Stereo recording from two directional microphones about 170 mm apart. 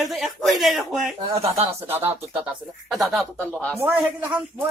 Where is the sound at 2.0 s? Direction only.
35° right (ahead or behind).